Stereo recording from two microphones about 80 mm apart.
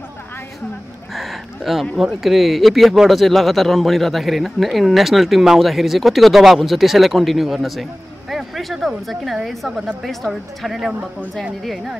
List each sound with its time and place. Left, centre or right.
1.1 s a sound: centre
2.0 s speech: centre
10.9 s speech: centre
11.6 s speech: centre